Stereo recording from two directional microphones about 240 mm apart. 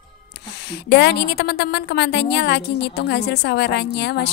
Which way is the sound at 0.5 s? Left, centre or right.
Left.